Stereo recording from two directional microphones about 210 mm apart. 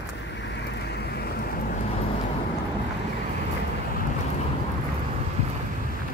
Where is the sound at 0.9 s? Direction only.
50° left (ahead or behind).